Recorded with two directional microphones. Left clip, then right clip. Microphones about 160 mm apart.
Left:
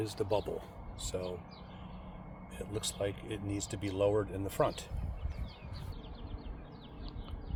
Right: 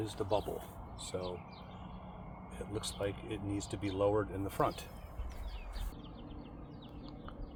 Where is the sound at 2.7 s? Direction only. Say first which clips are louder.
Left 2 dB; 20° left (ahead or behind).